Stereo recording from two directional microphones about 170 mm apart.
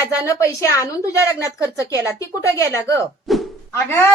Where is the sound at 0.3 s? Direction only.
15° left (ahead or behind).